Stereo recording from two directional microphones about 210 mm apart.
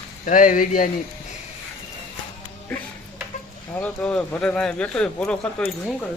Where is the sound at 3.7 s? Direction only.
5° left (ahead or behind).